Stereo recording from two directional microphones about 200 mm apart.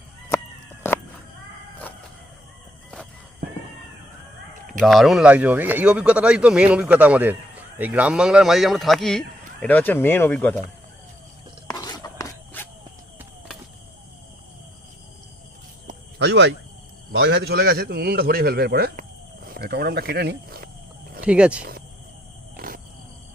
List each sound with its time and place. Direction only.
4.8 s speech: centre (ahead or behind)
11.7 s a sound: 20° left (ahead or behind)
16.1 s a man's voice: 60° right (ahead or behind)
21.2 s speech: 5° right (ahead or behind)
21.6 s a sound: 50° right (ahead or behind)
22.5 s roaring cats: 45° right (ahead or behind)